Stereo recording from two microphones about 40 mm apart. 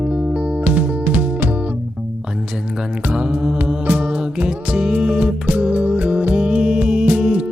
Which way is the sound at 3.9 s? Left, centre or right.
Right.